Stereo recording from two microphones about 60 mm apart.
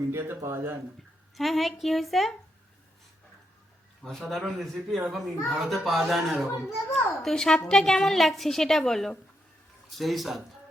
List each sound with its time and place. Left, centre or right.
0.1 s speech: right
1.4 s a woman's voice: centre
4.2 s a woman's voice: centre